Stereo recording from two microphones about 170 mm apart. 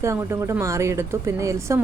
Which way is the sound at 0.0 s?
15° right (ahead or behind).